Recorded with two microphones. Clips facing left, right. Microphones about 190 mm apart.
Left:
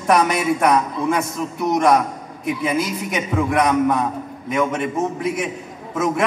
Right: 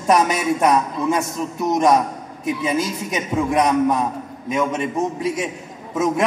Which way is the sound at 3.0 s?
20° right (ahead or behind).